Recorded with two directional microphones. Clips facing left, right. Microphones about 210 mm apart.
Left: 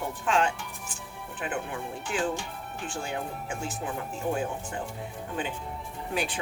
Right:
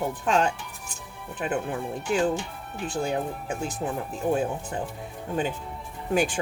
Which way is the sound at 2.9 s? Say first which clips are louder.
Right 7 dB; 40° right (ahead or behind).